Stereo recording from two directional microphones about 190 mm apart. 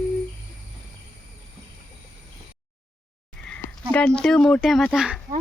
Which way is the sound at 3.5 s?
5° left (ahead or behind).